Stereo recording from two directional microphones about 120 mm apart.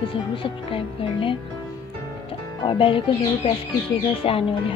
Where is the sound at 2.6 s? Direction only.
45° left (ahead or behind).